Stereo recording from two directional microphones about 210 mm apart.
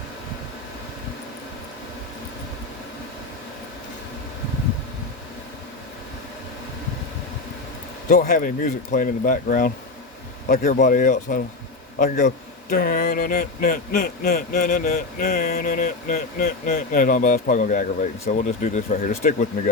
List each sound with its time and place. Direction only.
8.1 s speech: 35° left (ahead or behind)
12.7 s a sound: 45° left (ahead or behind)
18.3 s speech: 40° left (ahead or behind)